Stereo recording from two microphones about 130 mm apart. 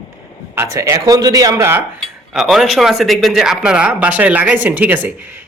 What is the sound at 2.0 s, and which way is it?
Speech, centre (ahead or behind).